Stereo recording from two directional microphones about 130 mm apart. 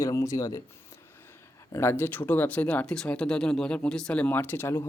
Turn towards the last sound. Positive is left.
turn(degrees=20)  # may be behind; listen again after turning